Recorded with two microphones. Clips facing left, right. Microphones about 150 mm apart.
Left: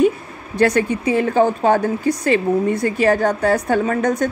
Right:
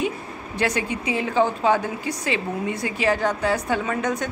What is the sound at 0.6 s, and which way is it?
A woman's voice, 45° left (ahead or behind).